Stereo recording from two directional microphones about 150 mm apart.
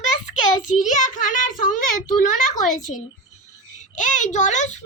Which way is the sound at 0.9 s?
60° left (ahead or behind).